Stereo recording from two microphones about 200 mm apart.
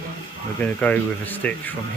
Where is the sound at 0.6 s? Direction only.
5° left (ahead or behind).